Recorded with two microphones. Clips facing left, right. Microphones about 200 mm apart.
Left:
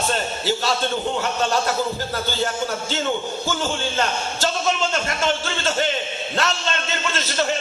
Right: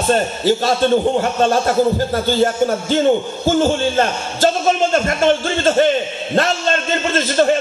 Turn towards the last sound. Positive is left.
turn(degrees=-45)  # may be behind; listen again after turning